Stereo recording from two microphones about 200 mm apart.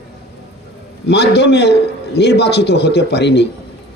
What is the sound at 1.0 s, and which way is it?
A man's voice, 55° left (ahead or behind).